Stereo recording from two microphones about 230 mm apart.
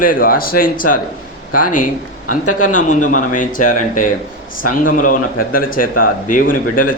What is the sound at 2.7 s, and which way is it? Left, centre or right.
Speech, left.